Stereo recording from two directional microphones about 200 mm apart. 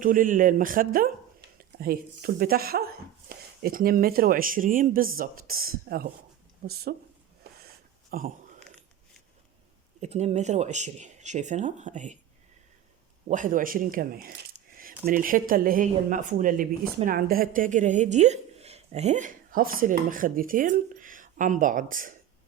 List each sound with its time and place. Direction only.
0.0 s speech: 40° right (ahead or behind)
8.1 s speech: 45° right (ahead or behind)
10.0 s speech: 35° right (ahead or behind)
13.2 s speech: 40° right (ahead or behind)